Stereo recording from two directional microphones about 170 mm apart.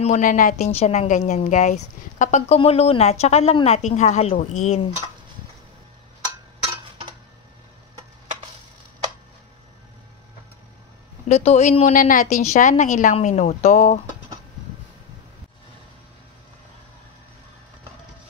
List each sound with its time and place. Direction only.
0.0 s speech: 50° left (ahead or behind)
0.7 s speech: 40° left (ahead or behind)
11.2 s speech: 40° left (ahead or behind)